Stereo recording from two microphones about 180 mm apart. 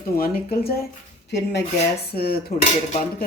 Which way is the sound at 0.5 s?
55° left (ahead or behind).